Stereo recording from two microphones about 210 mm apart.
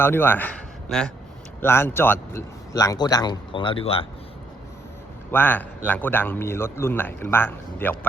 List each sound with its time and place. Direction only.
0.0 s a man's voice: 10° left (ahead or behind); by 4.0 s 25° left (ahead or behind)
5.3 s a man's voice: 10° left (ahead or behind)